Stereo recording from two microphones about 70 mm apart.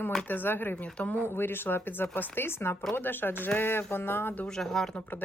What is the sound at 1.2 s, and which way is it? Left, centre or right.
Speech, left.